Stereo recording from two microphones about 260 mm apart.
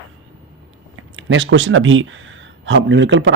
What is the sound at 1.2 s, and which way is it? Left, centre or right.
Speech, right.